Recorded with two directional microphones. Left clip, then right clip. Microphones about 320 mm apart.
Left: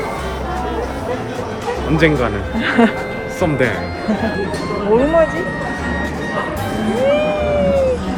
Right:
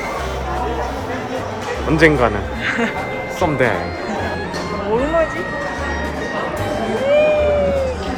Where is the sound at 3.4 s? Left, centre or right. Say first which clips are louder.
Even; centre.